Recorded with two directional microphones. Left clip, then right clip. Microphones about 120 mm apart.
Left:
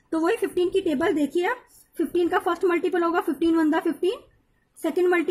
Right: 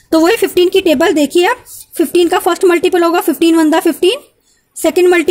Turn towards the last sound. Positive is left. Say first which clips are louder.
# right 12 dB
turn(degrees=-40)  # may be behind; listen again after turning